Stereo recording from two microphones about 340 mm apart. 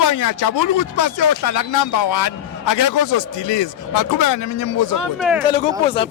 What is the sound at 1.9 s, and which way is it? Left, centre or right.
A man's voice, left.